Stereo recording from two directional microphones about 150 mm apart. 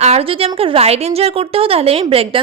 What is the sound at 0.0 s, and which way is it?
A woman's voice, 40° right (ahead or behind).